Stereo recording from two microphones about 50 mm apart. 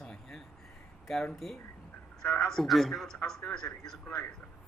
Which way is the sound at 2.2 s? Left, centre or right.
Left.